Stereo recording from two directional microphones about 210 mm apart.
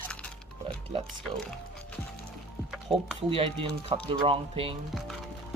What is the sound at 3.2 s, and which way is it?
Speech, 25° right (ahead or behind).